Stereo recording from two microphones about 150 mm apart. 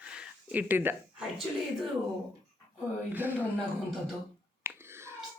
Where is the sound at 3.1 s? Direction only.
10° right (ahead or behind).